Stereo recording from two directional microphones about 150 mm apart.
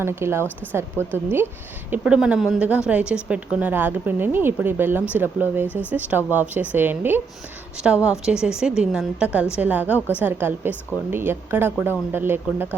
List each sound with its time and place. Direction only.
0.0 s a woman's voice: 15° right (ahead or behind)